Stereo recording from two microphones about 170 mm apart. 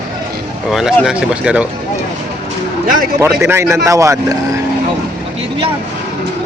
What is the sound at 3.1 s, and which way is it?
Speech, 15° right (ahead or behind).